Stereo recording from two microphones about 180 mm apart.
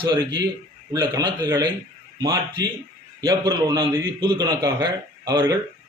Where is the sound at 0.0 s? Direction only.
25° right (ahead or behind).